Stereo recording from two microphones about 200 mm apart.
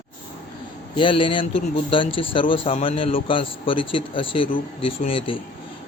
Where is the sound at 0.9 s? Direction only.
25° left (ahead or behind).